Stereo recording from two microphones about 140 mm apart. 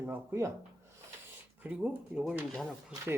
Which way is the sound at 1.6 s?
10° right (ahead or behind).